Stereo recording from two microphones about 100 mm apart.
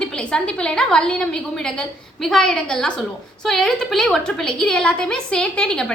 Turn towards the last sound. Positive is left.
turn(degrees=10)  # may be behind; listen again after turning